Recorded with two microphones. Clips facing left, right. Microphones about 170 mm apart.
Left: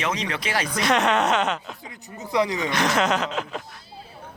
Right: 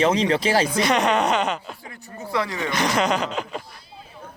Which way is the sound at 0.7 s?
Centre (ahead or behind).